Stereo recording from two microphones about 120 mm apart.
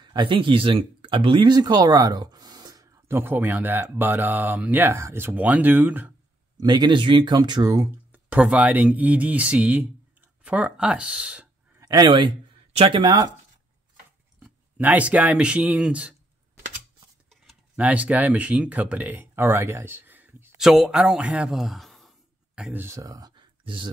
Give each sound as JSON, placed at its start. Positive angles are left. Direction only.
{"t": 0.0, "sound": "speech", "side_deg": -40}
{"t": 6.6, "sound": "speech", "side_deg": -40}
{"t": 8.1, "sound": "speech", "side_deg": -10}
{"t": 11.8, "sound": "speech", "side_deg": -35}
{"t": 14.4, "sound": "speech", "side_deg": -15}
{"t": 17.7, "sound": "speech", "side_deg": -10}
{"t": 20.5, "sound": "speech", "side_deg": 0}
{"t": 22.6, "sound": "speech", "side_deg": -15}
{"t": 22.9, "sound": "speech", "side_deg": -30}
{"t": 23.6, "sound": "speech", "side_deg": -45}